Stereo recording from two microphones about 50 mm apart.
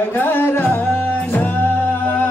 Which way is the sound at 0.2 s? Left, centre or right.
Left.